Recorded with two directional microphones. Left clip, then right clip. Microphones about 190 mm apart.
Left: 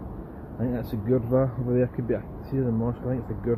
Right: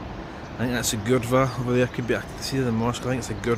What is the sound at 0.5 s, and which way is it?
Speech, 15° right (ahead or behind).